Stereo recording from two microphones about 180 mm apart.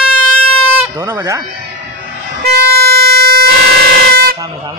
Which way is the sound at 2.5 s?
60° right (ahead or behind).